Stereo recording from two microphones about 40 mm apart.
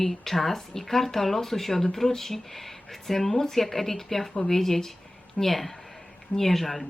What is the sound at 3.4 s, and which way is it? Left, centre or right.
Speech, centre.